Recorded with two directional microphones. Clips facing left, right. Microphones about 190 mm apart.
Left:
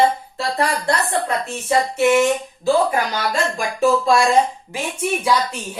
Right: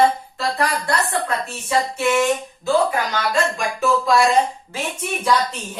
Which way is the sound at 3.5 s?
30° left (ahead or behind).